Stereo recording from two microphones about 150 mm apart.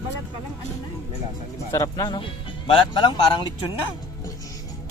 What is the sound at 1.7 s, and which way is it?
Speech, 25° left (ahead or behind).